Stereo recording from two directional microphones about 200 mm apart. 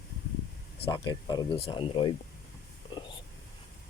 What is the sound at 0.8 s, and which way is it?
Speech, 20° left (ahead or behind).